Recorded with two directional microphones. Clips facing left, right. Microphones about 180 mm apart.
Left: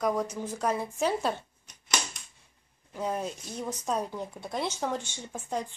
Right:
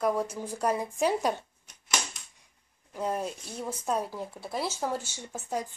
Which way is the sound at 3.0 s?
5° right (ahead or behind).